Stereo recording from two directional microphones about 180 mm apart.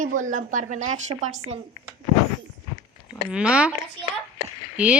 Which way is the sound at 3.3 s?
5° right (ahead or behind).